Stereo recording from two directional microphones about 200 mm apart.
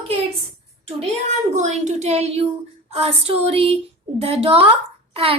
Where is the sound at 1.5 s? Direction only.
35° right (ahead or behind).